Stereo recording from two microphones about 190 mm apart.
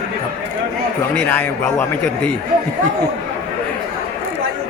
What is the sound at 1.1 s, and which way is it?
A man's voice, 10° left (ahead or behind).